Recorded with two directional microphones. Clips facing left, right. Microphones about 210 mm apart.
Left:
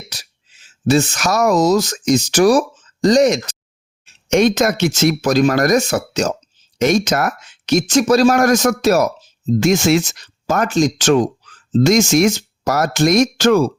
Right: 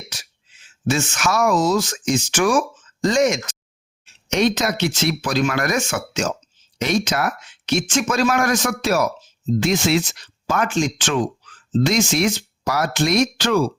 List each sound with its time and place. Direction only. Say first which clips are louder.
0.1 s a sound: left 2 dB; 35° left (ahead or behind)
0.9 s speech: left 6 dB; 35° left (ahead or behind)
4.0 s speech: left 5 dB; 50° left (ahead or behind)